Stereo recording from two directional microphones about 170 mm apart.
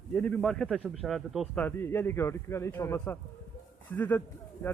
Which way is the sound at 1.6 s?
10° left (ahead or behind).